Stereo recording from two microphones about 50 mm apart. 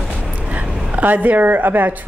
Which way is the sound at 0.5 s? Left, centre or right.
Right.